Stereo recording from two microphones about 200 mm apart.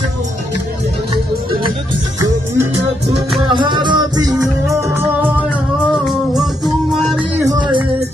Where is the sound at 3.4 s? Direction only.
25° right (ahead or behind).